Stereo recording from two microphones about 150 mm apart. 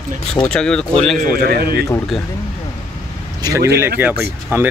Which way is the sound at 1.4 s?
90° right.